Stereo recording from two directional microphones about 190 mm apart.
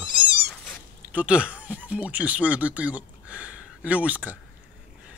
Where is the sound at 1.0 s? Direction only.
5° right (ahead or behind).